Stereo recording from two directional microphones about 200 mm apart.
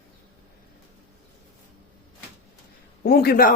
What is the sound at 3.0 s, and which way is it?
Speech, 50° left (ahead or behind).